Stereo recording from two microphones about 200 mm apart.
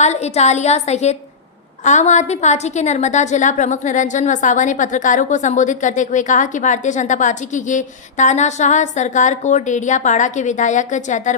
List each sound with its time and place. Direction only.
0.0 s a woman's voice: 35° left (ahead or behind)